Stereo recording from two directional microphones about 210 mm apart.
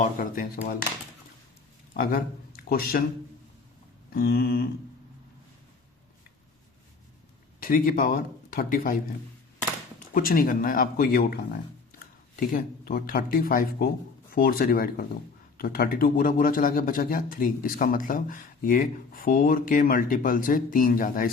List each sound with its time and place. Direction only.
0.0 s speech: 40° left (ahead or behind)
1.9 s speech: 40° left (ahead or behind)
4.1 s speech: 45° left (ahead or behind)
7.6 s speech: 40° left (ahead or behind)
10.2 s speech: 45° left (ahead or behind)
12.4 s speech: 40° left (ahead or behind)